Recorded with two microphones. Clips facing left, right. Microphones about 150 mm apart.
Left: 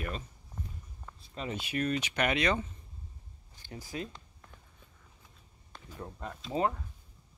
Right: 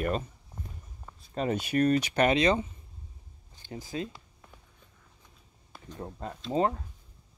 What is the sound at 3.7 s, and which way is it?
Speech, 25° right (ahead or behind).